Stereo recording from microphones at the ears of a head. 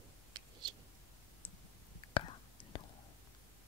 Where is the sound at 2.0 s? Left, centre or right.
Left.